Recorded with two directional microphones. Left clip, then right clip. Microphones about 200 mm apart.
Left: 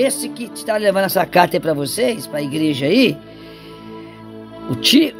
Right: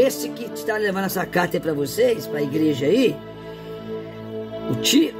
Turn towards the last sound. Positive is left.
turn(degrees=30)  # may be behind; listen again after turning